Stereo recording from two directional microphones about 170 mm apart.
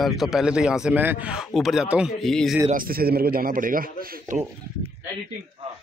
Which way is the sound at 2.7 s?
55° right (ahead or behind).